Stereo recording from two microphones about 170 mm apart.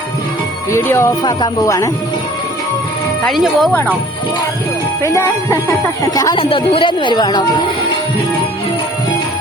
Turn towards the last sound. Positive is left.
turn(degrees=25)  # may be behind; listen again after turning